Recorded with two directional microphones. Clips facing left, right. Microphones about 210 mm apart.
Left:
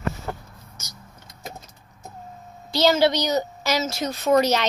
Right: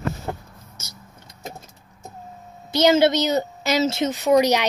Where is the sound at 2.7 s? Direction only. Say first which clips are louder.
Right 2 dB; 20° right (ahead or behind).